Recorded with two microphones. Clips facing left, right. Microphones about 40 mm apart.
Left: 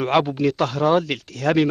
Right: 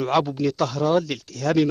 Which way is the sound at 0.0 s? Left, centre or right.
Left.